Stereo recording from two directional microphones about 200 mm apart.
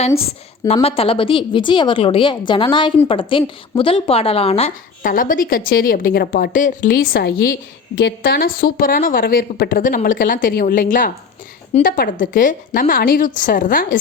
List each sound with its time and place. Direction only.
0.7 s a woman's voice: 30° left (ahead or behind)
5.0 s a woman's voice: 45° left (ahead or behind)